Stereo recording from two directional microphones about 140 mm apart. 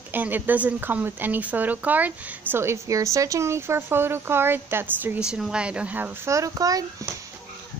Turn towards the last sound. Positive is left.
turn(degrees=-25)  # may be behind; listen again after turning